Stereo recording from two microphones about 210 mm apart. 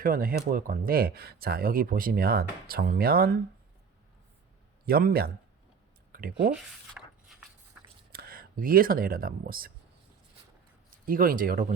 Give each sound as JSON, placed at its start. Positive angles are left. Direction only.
{"t": 0.0, "sound": "speech", "side_deg": -45}
{"t": 4.9, "sound": "speech", "side_deg": -45}
{"t": 6.6, "sound": "a sound", "side_deg": 0}
{"t": 8.1, "sound": "speech", "side_deg": -45}
{"t": 10.9, "sound": "speech", "side_deg": -40}